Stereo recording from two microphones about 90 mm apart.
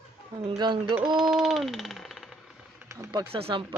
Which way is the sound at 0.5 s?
60° right (ahead or behind).